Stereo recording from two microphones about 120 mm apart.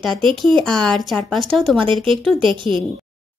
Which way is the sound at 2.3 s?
45° right (ahead or behind).